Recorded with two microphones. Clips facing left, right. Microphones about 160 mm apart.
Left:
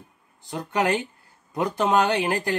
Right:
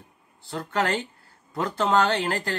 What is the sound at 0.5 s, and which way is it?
Speech, 15° left (ahead or behind).